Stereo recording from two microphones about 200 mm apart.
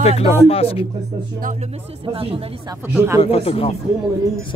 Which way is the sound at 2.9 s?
10° right (ahead or behind).